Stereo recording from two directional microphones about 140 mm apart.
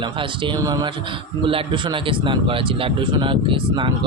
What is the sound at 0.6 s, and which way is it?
Speech, 25° right (ahead or behind).